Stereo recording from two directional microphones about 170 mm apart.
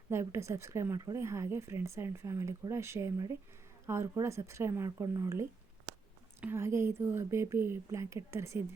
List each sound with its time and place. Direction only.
0.1 s speech: 15° right (ahead or behind)